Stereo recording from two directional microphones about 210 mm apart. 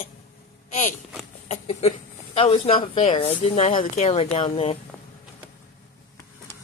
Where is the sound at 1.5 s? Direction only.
30° left (ahead or behind).